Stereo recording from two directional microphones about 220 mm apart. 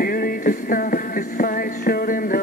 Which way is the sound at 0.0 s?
40° left (ahead or behind).